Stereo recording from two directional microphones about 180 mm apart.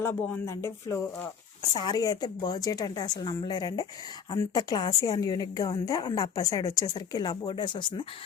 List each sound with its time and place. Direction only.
0.0 s a woman's voice: 10° left (ahead or behind)